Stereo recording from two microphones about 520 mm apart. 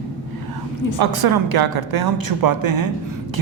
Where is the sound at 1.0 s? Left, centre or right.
Right.